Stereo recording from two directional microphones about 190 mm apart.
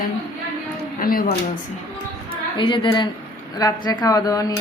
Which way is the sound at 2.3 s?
25° left (ahead or behind).